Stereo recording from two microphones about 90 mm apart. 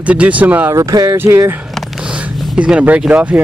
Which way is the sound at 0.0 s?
15° right (ahead or behind).